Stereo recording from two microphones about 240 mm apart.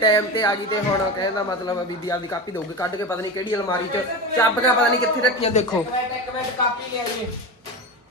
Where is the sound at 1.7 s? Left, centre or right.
Centre.